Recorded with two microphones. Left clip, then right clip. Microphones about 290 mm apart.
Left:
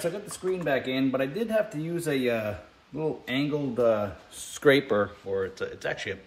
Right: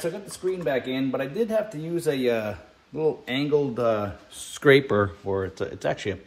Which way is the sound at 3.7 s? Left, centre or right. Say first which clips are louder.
Even; right.